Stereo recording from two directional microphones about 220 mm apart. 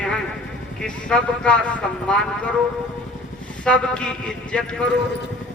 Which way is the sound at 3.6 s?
5° left (ahead or behind).